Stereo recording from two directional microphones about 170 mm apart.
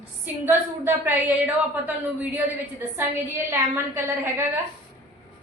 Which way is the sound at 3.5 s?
15° right (ahead or behind).